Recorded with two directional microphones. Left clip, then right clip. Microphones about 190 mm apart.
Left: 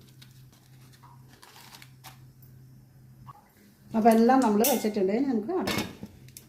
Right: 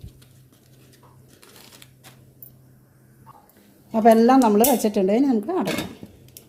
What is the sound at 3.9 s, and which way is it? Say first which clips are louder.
Speech: right 6 dB; 40° right (ahead or behind).